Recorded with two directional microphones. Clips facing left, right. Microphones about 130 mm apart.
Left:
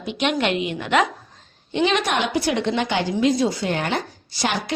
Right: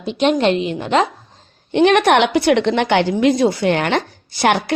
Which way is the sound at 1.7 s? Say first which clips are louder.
Right 8 dB; 60° right (ahead or behind).